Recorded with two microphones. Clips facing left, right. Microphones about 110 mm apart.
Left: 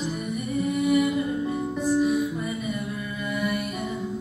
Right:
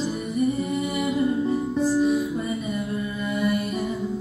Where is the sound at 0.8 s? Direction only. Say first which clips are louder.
Left 5 dB; 30° right (ahead or behind).